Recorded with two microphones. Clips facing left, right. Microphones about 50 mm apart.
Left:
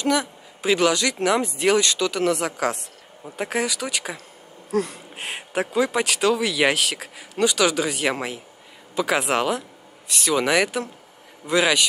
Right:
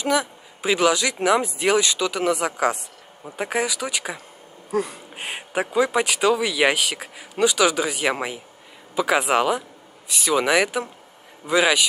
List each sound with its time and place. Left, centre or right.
0.0 s speech: centre